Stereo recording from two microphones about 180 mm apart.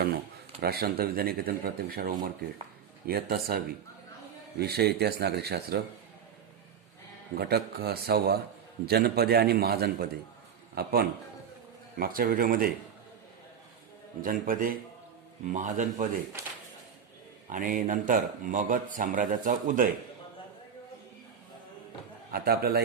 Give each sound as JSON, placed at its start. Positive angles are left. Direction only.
{"t": 0.6, "sound": "speech", "side_deg": -60}
{"t": 7.3, "sound": "speech", "side_deg": -60}
{"t": 14.2, "sound": "speech", "side_deg": -50}
{"t": 17.5, "sound": "speech", "side_deg": -50}
{"t": 22.3, "sound": "speech", "side_deg": -60}